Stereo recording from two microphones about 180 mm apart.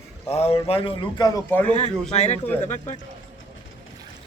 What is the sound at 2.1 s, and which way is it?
Speech, 40° left (ahead or behind).